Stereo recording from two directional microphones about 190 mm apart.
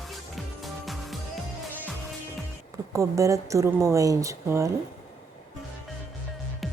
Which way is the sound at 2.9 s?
15° right (ahead or behind).